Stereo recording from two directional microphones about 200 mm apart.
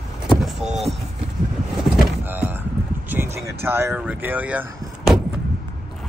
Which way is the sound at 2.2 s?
10° right (ahead or behind).